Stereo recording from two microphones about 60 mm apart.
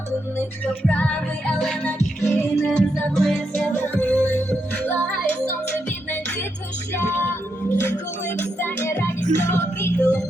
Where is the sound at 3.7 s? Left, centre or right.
Left.